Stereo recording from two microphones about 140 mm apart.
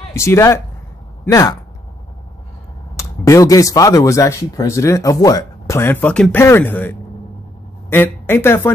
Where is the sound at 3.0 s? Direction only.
20° left (ahead or behind).